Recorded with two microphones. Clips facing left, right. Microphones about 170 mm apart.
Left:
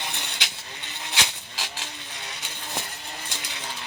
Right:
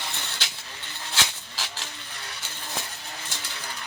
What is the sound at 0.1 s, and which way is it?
Vehicle, 15° left (ahead or behind).